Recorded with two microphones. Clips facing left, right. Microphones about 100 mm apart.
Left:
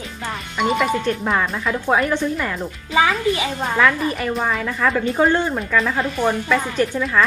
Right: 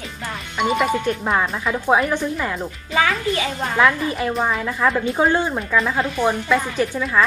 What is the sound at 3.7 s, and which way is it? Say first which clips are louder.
Speech: right 1 dB; 15° right (ahead or behind).